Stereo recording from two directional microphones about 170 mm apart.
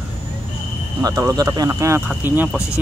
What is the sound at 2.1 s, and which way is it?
Speech, 5° right (ahead or behind).